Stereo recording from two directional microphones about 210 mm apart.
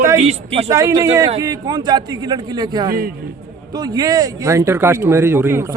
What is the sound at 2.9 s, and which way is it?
Speech, 45° right (ahead or behind).